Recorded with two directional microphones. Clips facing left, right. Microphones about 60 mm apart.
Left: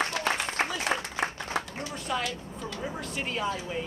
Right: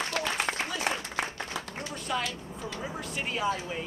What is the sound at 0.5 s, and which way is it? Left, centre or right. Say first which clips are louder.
Applause: left 2 dB; right.